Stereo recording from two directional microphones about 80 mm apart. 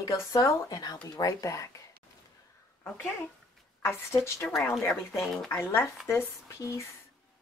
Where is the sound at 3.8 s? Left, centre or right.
Left.